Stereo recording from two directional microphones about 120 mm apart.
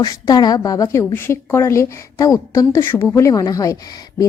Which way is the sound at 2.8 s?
15° left (ahead or behind).